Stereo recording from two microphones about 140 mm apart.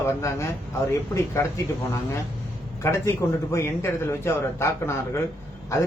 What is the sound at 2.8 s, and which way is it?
A man's voice, 20° left (ahead or behind).